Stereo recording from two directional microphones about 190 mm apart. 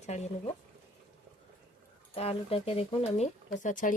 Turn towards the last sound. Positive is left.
turn(degrees=40)  # may be behind; listen again after turning